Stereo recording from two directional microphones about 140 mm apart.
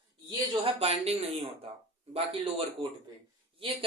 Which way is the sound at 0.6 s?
45° right (ahead or behind).